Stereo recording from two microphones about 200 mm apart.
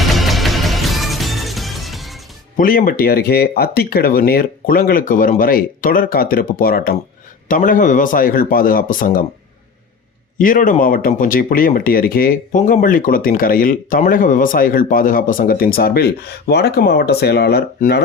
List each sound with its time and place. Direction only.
0.0 s music: centre (ahead or behind)
2.6 s speech: 45° left (ahead or behind)
10.3 s speech: 40° left (ahead or behind)